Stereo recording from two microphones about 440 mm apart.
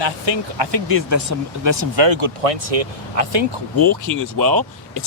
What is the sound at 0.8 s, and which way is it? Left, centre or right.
Speech, right.